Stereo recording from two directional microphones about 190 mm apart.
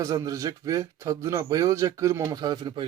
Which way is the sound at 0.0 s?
15° right (ahead or behind).